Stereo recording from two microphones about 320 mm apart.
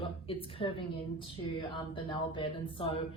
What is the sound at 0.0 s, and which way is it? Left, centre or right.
Speech, centre.